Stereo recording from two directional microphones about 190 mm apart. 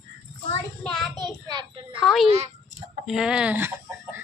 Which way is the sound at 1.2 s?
20° right (ahead or behind).